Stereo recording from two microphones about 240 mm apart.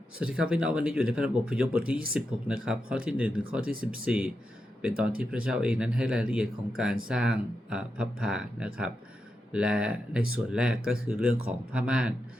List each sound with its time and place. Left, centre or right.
0.2 s speech: centre